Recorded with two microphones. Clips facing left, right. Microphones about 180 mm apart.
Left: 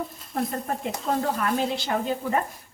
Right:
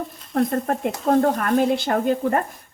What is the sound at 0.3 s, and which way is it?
Speech, 55° right (ahead or behind).